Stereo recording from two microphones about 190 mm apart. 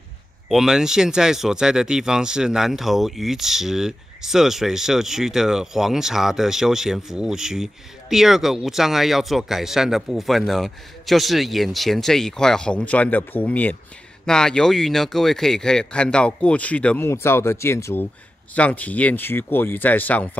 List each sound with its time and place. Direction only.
0.5 s speech: centre (ahead or behind)